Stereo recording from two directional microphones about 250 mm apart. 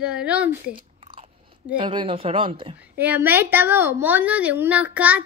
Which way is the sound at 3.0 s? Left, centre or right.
Centre.